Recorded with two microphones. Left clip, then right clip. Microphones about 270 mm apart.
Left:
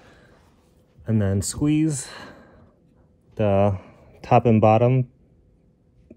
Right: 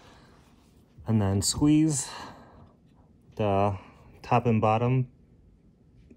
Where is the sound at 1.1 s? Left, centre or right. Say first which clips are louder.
Left 3 dB; centre.